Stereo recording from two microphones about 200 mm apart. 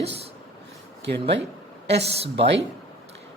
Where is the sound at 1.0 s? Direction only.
60° right (ahead or behind).